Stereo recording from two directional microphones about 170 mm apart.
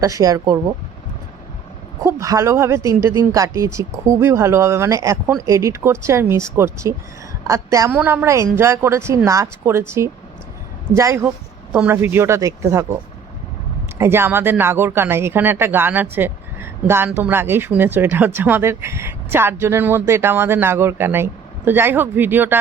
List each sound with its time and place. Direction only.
0.0 s speech: 20° right (ahead or behind)
2.0 s speech: 20° right (ahead or behind)
14.0 s speech: 15° right (ahead or behind)